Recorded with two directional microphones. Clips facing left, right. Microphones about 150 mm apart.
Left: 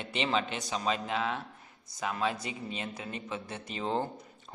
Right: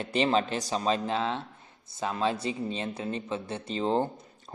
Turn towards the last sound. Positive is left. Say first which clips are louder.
# right 5 dB
turn(degrees=-30)  # may be behind; listen again after turning